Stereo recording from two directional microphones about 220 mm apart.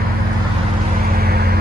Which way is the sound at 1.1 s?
45° right (ahead or behind).